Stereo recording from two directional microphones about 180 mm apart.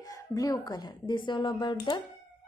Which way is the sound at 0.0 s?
20° left (ahead or behind).